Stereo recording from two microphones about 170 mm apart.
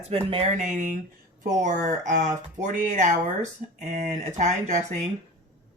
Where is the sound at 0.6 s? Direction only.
50° right (ahead or behind).